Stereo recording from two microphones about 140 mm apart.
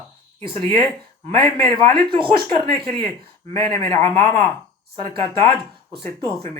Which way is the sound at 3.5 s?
15° left (ahead or behind).